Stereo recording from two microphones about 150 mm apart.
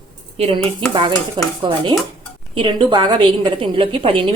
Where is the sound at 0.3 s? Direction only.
40° right (ahead or behind).